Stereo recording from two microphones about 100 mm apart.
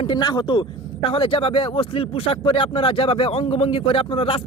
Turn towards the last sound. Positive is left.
turn(degrees=65)  # may be behind; listen again after turning